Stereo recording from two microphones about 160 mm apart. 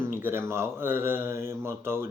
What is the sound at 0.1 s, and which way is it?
Speech, 15° right (ahead or behind).